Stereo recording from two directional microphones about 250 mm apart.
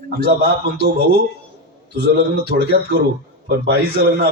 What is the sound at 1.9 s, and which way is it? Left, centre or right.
A man's voice, right.